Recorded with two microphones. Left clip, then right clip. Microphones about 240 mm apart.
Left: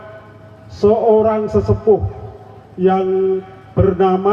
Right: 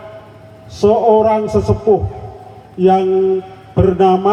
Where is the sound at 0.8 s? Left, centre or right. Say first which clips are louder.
Right 2 dB; right.